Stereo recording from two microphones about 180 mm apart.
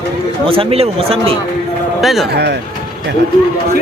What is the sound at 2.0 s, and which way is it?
Speech, centre (ahead or behind).